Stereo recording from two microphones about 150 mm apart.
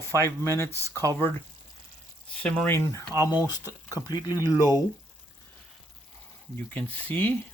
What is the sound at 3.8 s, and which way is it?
Speech, 25° left (ahead or behind).